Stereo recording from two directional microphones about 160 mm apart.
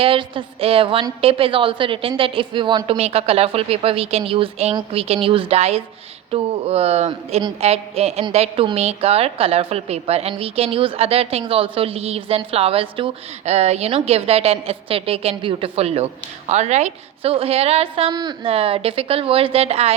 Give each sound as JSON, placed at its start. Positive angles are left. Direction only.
{"t": 0.0, "sound": "a woman's voice", "side_deg": -35}
{"t": 18.5, "sound": "a woman's voice", "side_deg": -35}